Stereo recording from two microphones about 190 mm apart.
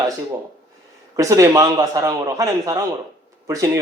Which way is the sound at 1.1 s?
15° right (ahead or behind).